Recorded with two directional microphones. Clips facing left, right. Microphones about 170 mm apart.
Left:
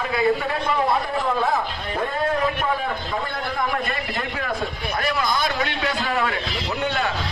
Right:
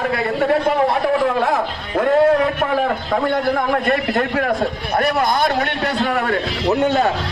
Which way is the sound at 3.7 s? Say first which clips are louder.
Right 9 dB; 60° right (ahead or behind).